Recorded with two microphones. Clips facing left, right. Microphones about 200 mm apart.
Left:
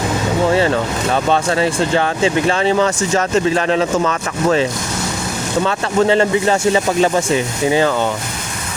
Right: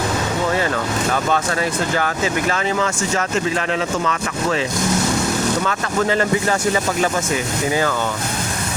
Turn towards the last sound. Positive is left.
turn(degrees=25)  # may be behind; listen again after turning